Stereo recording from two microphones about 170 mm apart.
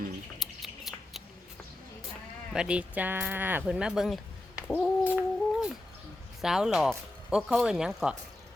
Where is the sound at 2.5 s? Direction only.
5° right (ahead or behind).